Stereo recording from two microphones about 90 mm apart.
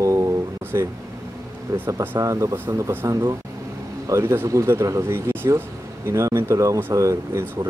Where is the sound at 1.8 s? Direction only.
35° right (ahead or behind).